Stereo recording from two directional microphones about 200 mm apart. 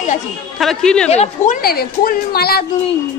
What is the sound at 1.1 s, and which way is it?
Speech, 30° left (ahead or behind).